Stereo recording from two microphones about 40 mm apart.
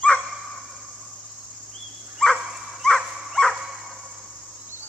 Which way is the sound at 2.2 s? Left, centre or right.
Centre.